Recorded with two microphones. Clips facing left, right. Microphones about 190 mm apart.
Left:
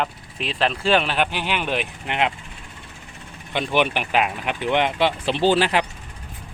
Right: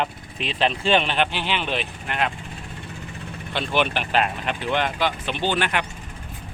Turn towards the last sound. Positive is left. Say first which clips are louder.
# left 5 dB
turn(degrees=30)  # may be behind; listen again after turning